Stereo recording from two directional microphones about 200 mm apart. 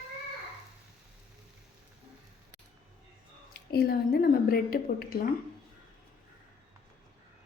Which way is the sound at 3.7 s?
50° left (ahead or behind).